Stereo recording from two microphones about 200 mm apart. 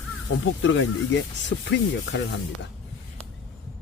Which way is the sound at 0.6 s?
70° left (ahead or behind).